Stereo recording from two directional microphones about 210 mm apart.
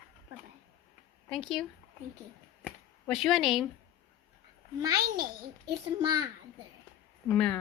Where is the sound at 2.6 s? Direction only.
Centre (ahead or behind).